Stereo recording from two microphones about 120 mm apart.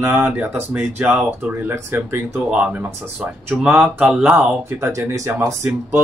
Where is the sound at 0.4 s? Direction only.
15° right (ahead or behind).